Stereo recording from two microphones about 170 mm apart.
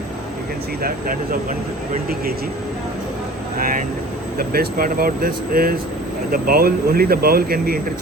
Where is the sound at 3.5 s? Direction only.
55° right (ahead or behind).